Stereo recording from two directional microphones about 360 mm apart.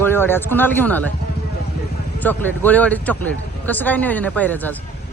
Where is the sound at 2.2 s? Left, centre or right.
Centre.